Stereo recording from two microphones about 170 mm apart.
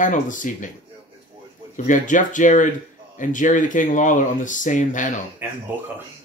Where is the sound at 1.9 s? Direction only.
50° left (ahead or behind).